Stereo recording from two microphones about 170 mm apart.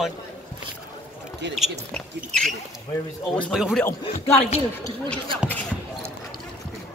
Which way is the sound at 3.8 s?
15° left (ahead or behind).